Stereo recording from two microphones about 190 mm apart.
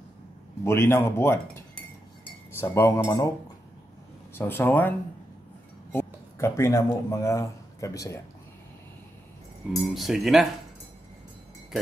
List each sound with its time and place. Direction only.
0.7 s speech: 15° left (ahead or behind)
2.6 s speech: 15° left (ahead or behind)
4.3 s speech: 10° left (ahead or behind)
9.7 s cutlery: centre (ahead or behind)